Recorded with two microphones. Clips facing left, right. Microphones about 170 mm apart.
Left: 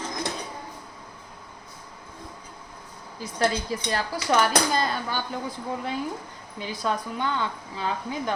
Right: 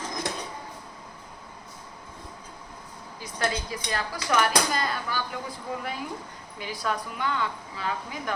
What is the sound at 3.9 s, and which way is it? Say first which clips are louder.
A woman's voice: left 3 dB; 30° left (ahead or behind).